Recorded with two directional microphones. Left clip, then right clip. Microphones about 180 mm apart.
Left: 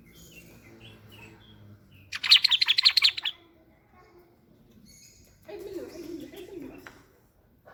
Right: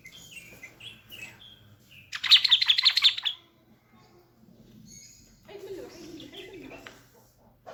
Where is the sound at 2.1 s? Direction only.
15° left (ahead or behind).